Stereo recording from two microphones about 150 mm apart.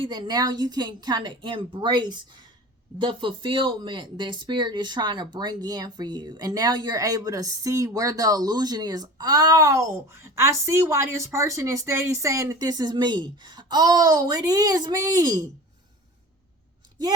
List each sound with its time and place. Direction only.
0.0 s speech: 30° right (ahead or behind)